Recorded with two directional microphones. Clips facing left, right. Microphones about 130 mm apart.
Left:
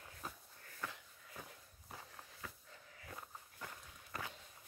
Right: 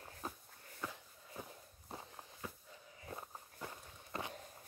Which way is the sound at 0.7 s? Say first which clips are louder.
Right 2 dB; 20° right (ahead or behind).